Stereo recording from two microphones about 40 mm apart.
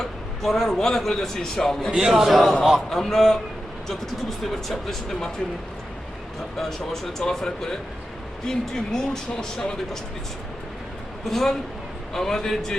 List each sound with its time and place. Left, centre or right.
0.0 s a man's voice: centre
2.0 s a man's voice: centre
4.7 s speech: centre
6.6 s speech: centre
11.3 s speech: centre